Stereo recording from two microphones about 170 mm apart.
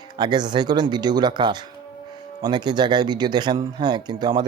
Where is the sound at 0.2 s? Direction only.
25° right (ahead or behind).